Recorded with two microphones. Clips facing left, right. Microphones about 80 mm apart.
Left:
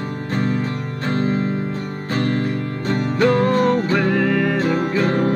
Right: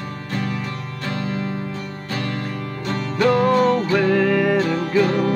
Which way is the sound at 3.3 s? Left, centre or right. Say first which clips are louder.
Right 1 dB; centre.